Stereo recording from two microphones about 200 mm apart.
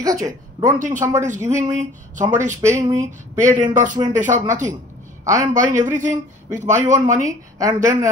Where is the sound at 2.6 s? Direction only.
15° right (ahead or behind).